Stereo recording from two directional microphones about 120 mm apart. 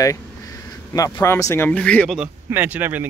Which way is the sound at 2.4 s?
15° right (ahead or behind).